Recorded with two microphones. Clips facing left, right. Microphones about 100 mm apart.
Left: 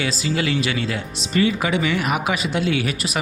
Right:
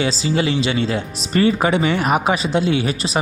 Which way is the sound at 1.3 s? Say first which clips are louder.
Right 4 dB; 40° right (ahead or behind).